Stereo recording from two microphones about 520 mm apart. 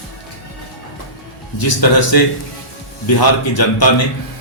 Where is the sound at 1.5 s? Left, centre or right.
Left.